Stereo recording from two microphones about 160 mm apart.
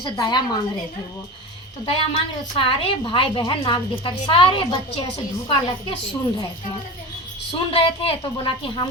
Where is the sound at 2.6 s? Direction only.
35° left (ahead or behind).